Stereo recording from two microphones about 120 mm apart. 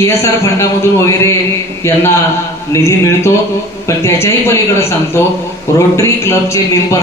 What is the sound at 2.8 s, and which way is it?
A man's voice, 25° left (ahead or behind).